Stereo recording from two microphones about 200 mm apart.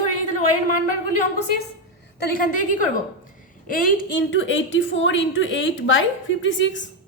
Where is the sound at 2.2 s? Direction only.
45° left (ahead or behind).